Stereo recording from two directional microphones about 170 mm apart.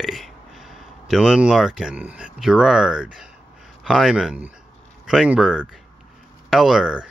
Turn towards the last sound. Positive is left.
turn(degrees=-5)  # may be behind; listen again after turning